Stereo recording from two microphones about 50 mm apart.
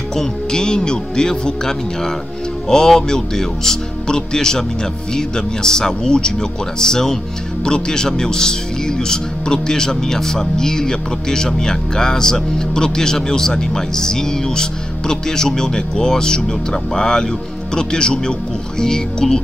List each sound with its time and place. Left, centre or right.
0.1 s a man's voice: centre